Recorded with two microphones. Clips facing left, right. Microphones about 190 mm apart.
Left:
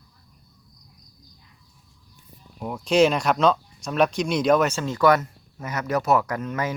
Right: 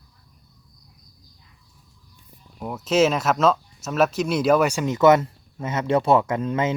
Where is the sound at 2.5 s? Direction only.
5° right (ahead or behind).